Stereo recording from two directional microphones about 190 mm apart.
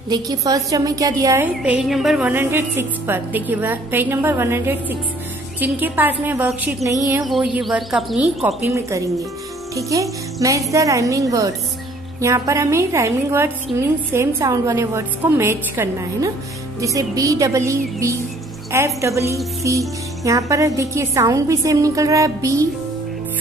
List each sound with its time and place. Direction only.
0.1 s a woman's voice: 20° right (ahead or behind)
7.2 s speech: centre (ahead or behind)
8.6 s a woman's voice: 15° right (ahead or behind)